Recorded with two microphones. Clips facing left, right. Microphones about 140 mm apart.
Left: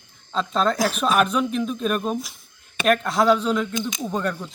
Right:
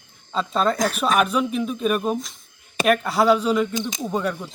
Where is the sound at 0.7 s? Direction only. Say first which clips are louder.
Even; 5° left (ahead or behind).